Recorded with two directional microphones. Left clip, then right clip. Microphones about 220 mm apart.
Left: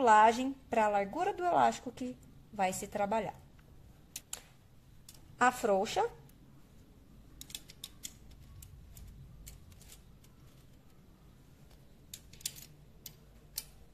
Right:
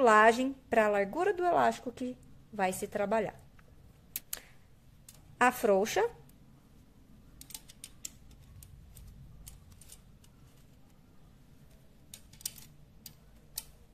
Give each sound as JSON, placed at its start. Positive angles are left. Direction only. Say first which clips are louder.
{"t": 0.0, "sound": "a woman's voice", "louder": "right 1 dB", "side_deg": -25}
{"t": 4.1, "sound": "a sound", "louder": "right 2 dB", "side_deg": -20}
{"t": 5.4, "sound": "a woman's voice", "louder": "right 2 dB", "side_deg": -20}